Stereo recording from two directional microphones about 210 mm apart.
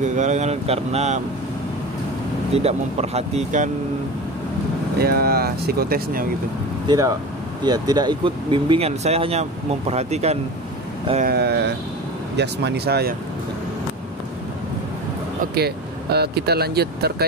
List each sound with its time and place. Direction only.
0.0 s speech: 35° right (ahead or behind)
2.5 s speech: 30° right (ahead or behind)
4.9 s speech: 45° right (ahead or behind)
6.9 s speech: 15° right (ahead or behind)
11.2 s speech: 50° right (ahead or behind)
15.4 s speech: 50° right (ahead or behind)